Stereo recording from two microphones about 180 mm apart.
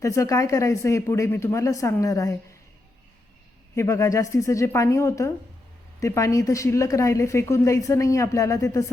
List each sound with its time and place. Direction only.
0.0 s a woman's voice: 15° left (ahead or behind)
3.8 s a woman's voice: 15° left (ahead or behind)